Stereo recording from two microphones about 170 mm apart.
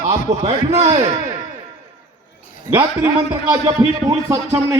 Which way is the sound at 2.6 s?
15° right (ahead or behind).